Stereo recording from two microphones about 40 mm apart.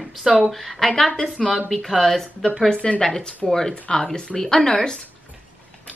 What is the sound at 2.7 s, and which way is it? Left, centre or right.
Speech, left.